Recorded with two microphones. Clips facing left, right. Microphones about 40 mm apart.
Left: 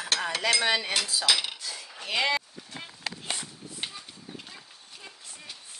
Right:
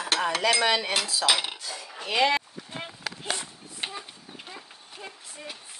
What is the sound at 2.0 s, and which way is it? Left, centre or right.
Speech, centre.